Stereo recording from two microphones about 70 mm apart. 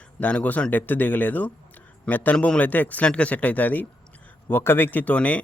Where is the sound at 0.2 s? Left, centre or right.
Left.